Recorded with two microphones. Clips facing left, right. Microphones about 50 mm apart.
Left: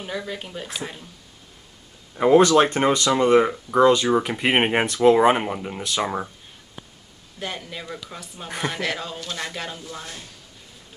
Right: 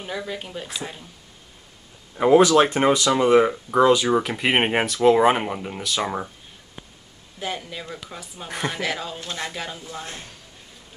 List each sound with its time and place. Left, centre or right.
0.0 s speech: centre
2.1 s speech: centre
4.2 s speech: centre
7.3 s speech: centre
9.2 s speech: centre
9.5 s speech: centre
10.0 s speech: right